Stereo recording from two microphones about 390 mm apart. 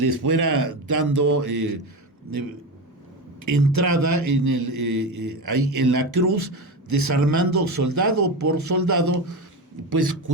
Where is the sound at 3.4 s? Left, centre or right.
Right.